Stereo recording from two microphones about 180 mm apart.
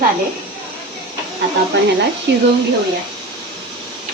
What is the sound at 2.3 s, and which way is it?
Speech, 70° right (ahead or behind).